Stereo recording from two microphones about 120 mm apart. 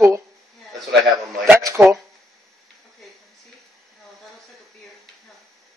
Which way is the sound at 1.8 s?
30° right (ahead or behind).